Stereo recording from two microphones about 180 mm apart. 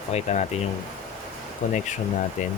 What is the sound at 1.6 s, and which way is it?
Speech, 45° left (ahead or behind).